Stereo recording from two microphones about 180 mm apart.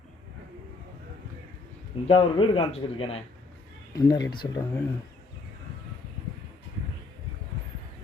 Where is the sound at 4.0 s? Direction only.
20° left (ahead or behind).